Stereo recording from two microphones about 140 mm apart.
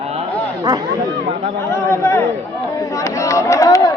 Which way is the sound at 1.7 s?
15° left (ahead or behind).